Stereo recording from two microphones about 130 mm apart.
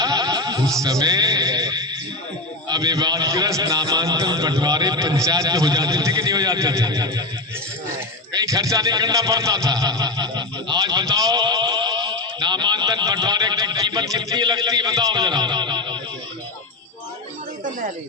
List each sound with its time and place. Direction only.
0.0 s music: 30° right (ahead or behind)
0.8 s a man's voice: 25° right (ahead or behind)
8.4 s speech: 25° right (ahead or behind)
17.7 s speech: 80° right